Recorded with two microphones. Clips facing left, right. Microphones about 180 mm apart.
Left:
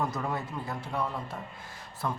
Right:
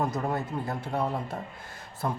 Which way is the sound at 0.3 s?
50° right (ahead or behind).